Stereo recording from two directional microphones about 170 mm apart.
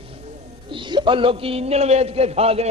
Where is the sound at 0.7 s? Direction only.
30° right (ahead or behind).